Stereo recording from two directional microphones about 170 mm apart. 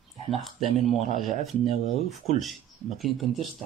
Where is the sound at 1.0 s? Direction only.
45° right (ahead or behind).